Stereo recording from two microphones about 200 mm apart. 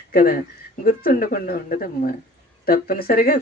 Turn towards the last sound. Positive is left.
turn(degrees=45)  # may be behind; listen again after turning